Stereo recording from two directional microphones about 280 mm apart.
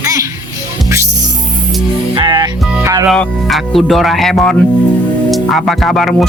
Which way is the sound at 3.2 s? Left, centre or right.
Centre.